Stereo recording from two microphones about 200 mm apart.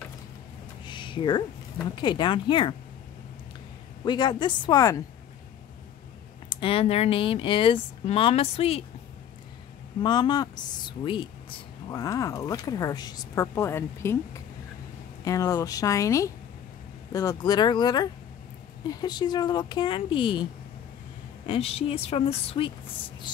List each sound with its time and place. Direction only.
0.8 s a sound: 25° left (ahead or behind)
2.0 s speech: 20° left (ahead or behind)
4.0 s speech: 20° left (ahead or behind)
6.5 s speech: 25° left (ahead or behind)
10.0 s speech: 20° left (ahead or behind)
15.2 s speech: 15° left (ahead or behind)
21.5 s speech: 30° left (ahead or behind)